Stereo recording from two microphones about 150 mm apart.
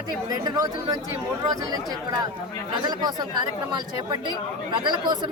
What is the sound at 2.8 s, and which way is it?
Speech, 30° right (ahead or behind).